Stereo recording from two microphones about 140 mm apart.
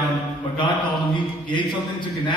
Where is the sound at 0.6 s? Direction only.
35° left (ahead or behind).